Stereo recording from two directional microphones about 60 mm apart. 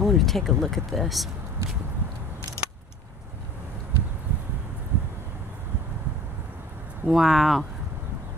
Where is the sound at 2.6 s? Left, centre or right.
Left.